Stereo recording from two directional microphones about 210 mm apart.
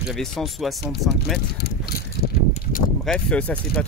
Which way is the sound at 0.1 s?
Centre (ahead or behind).